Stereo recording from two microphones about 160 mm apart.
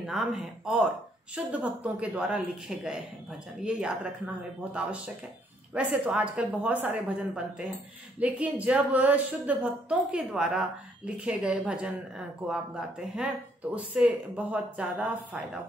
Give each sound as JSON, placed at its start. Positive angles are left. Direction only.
{"t": 0.0, "sound": "speech", "side_deg": 0}
{"t": 5.8, "sound": "a woman's voice", "side_deg": -10}
{"t": 13.7, "sound": "a woman's voice", "side_deg": -10}